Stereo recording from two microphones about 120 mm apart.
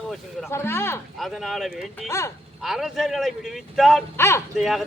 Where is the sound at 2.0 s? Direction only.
25° left (ahead or behind).